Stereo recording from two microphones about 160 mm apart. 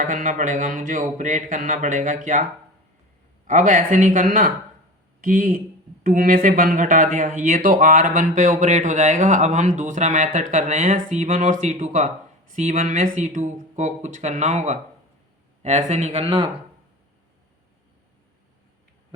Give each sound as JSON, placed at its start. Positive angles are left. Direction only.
{"t": 0.0, "sound": "speech", "side_deg": -55}